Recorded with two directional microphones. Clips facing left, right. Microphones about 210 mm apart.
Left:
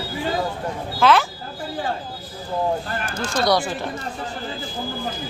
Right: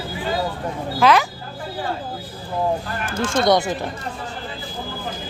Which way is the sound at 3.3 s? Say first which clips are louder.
Right 3 dB; 20° right (ahead or behind).